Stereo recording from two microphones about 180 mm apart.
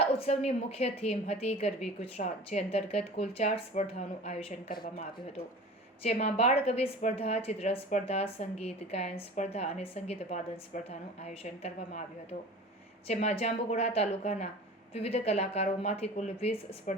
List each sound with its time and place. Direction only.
0.2 s a woman's voice: 35° left (ahead or behind)
4.7 s speech: 55° left (ahead or behind)
6.0 s a woman's voice: 35° left (ahead or behind)
11.2 s a woman's voice: 40° left (ahead or behind)